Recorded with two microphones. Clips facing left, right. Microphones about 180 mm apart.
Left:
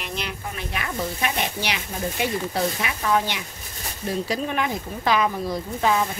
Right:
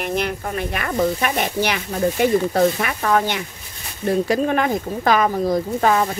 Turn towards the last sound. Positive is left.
turn(degrees=-50)  # may be behind; listen again after turning